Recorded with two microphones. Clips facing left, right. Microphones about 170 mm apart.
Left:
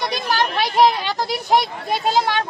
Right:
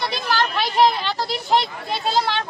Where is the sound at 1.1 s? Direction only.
45° left (ahead or behind).